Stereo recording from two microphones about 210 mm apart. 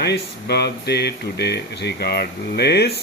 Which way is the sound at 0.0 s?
50° left (ahead or behind).